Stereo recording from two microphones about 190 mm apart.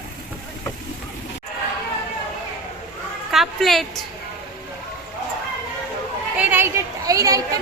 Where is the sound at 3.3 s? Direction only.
Centre (ahead or behind).